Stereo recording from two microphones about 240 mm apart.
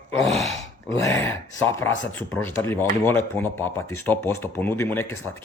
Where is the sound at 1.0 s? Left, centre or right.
Centre.